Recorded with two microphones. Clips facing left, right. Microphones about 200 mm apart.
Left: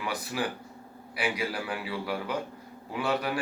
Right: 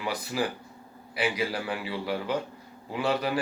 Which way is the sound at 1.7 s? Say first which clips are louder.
Right 2 dB; centre (ahead or behind).